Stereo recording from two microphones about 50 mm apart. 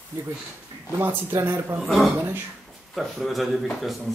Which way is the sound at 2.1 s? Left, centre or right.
Right.